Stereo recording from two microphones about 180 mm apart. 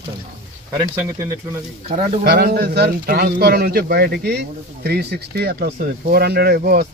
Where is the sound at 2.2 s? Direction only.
60° right (ahead or behind).